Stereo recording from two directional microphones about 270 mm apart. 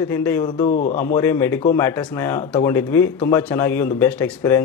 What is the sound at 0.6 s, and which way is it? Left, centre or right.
Speech, left.